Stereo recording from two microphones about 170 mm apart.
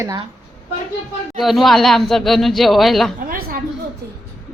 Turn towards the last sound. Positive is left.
turn(degrees=-60)  # may be behind; listen again after turning